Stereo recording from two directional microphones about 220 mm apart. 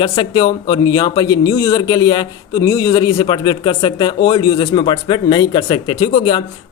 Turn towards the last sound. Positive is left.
turn(degrees=25)  # may be behind; listen again after turning